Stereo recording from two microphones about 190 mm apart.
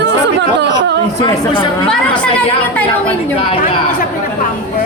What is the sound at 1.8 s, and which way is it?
Speech, 5° left (ahead or behind).